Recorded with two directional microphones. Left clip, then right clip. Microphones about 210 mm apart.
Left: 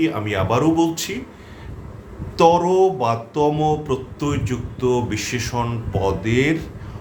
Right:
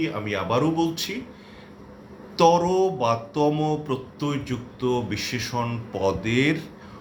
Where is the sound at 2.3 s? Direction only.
Centre (ahead or behind).